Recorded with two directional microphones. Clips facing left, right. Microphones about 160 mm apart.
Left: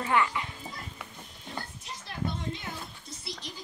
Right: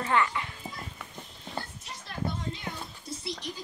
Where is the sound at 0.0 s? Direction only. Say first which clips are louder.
Even; 20° left (ahead or behind).